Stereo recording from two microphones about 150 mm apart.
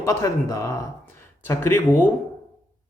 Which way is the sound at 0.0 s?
20° left (ahead or behind).